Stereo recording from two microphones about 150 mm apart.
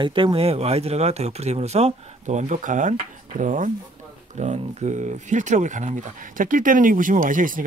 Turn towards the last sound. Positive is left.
turn(degrees=-65)  # may be behind; listen again after turning